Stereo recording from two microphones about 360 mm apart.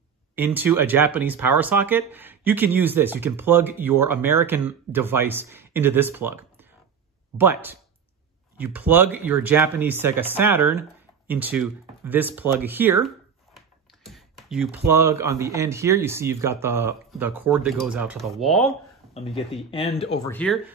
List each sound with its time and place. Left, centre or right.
0.4 s speech: centre
19.1 s speech: centre